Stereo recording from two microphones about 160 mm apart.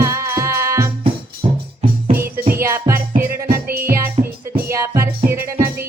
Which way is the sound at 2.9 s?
15° right (ahead or behind).